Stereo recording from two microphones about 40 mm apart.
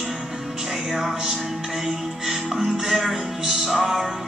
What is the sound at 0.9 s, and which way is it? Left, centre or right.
Music, centre.